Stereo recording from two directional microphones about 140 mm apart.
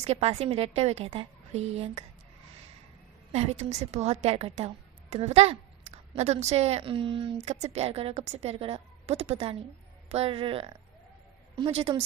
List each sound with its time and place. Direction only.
0.0 s a woman's voice: 50° right (ahead or behind)
3.3 s a woman's voice: 50° right (ahead or behind)